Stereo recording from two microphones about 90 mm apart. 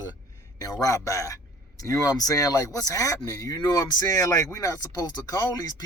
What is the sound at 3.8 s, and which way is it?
Speech, 35° left (ahead or behind).